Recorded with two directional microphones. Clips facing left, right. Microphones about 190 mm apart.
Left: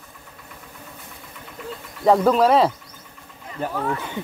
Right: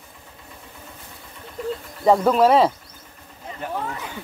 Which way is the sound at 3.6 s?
35° left (ahead or behind).